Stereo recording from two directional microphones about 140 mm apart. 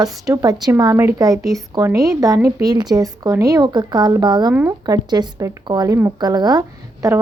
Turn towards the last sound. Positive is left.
turn(degrees=-25)  # may be behind; listen again after turning